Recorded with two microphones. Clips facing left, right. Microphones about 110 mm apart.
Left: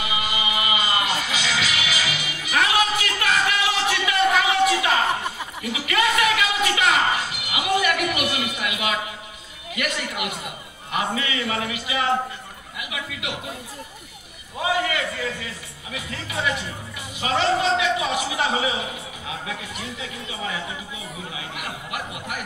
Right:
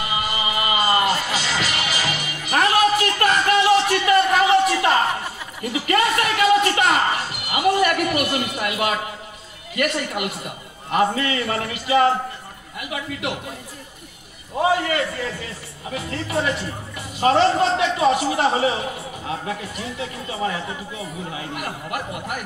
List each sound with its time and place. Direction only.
0.0 s music: 45° right (ahead or behind)
5.6 s a sound: 45° right (ahead or behind)
9.8 s a man's voice: 45° right (ahead or behind)
14.6 s a man's voice: 45° right (ahead or behind)